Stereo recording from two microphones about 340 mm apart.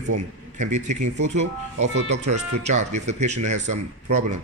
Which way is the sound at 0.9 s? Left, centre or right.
Right.